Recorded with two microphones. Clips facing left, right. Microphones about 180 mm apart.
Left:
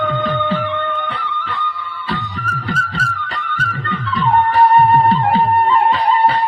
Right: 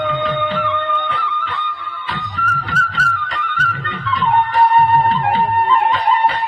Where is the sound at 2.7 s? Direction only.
40° left (ahead or behind).